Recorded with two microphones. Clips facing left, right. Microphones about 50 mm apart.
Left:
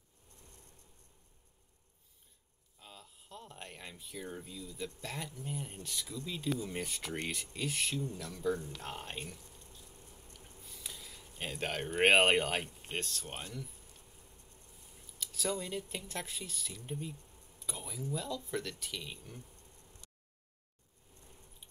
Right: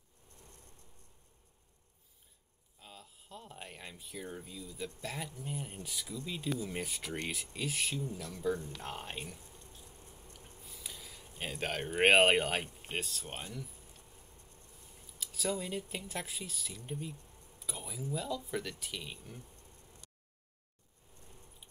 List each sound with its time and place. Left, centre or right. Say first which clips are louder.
2.8 s speech: right 1 dB; centre
9.8 s a sound: right 1 dB; centre
11.2 s speech: even; centre
14.9 s speech: left 1 dB; centre